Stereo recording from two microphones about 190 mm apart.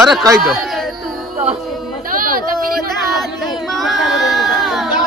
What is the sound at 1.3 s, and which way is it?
Music, 30° right (ahead or behind).